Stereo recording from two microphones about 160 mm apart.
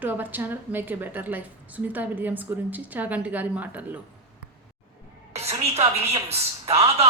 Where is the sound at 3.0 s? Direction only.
10° right (ahead or behind).